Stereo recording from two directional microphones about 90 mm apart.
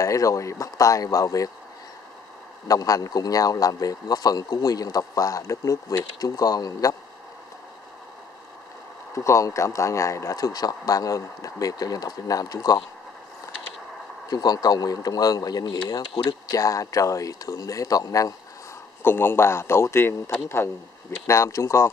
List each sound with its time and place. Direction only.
0.0 s speech: 40° left (ahead or behind)
2.7 s a man's voice: 40° left (ahead or behind)
9.1 s speech: 35° left (ahead or behind)
14.3 s a man's voice: 45° left (ahead or behind)
19.0 s a man's voice: 25° left (ahead or behind)